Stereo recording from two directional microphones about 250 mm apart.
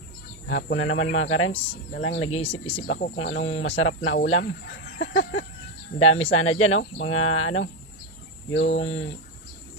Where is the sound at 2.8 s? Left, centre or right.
Left.